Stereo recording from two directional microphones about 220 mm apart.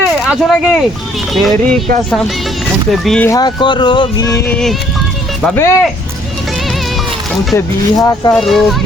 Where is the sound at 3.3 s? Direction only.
20° left (ahead or behind).